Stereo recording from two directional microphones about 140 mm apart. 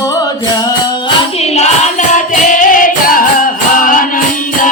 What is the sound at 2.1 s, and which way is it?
Music, 65° left (ahead or behind).